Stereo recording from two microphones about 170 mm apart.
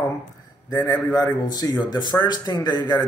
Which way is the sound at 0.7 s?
20° left (ahead or behind).